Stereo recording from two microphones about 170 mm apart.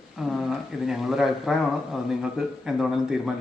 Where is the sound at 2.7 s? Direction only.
Centre (ahead or behind).